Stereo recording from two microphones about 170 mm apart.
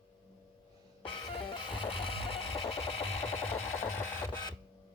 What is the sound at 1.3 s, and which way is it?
Music, 30° left (ahead or behind).